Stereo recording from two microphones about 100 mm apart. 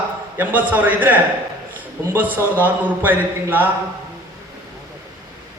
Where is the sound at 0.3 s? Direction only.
15° right (ahead or behind).